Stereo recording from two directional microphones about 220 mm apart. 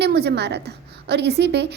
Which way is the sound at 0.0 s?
50° right (ahead or behind).